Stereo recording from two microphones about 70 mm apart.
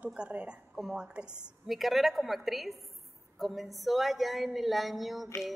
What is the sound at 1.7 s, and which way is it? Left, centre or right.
A woman's voice, centre.